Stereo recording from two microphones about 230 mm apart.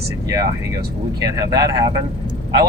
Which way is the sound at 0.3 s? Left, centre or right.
Centre.